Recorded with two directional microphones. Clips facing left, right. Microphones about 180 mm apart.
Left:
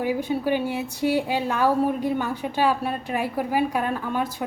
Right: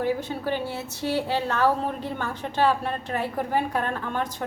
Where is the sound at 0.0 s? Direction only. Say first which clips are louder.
Left 2 dB; 10° left (ahead or behind).